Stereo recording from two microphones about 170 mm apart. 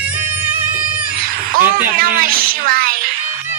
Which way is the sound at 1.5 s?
55° right (ahead or behind).